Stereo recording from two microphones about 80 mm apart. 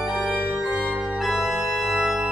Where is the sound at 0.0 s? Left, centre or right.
Centre.